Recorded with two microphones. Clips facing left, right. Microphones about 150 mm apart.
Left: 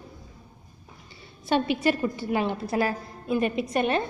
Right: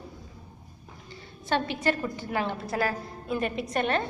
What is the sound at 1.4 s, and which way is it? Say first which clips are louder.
A woman's voice: left 3 dB; 15° left (ahead or behind).